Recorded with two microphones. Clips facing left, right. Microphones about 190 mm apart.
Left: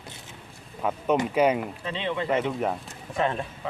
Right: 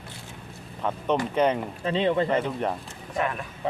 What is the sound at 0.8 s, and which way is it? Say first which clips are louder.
Speech: left 1 dB; 10° left (ahead or behind).